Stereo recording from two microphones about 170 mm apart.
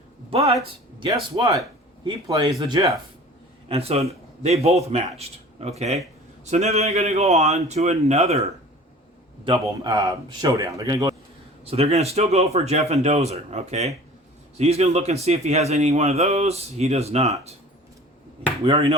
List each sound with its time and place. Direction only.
0.3 s speech: 35° right (ahead or behind)
3.7 s a man's voice: 35° right (ahead or behind)
9.8 s speech: 20° right (ahead or behind)
11.6 s a man's voice: 35° right (ahead or behind)
18.6 s a man's voice: 35° right (ahead or behind)